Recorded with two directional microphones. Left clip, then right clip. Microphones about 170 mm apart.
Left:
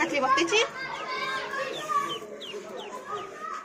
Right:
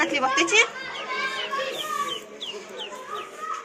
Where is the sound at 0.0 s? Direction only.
Centre (ahead or behind).